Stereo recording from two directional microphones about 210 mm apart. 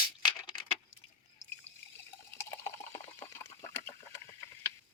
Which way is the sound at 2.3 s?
10° left (ahead or behind).